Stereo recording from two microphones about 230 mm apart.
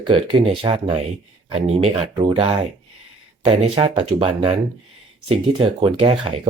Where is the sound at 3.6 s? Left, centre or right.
Right.